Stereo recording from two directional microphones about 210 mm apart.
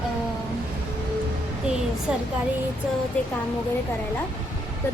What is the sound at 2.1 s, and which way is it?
Speech, 5° right (ahead or behind).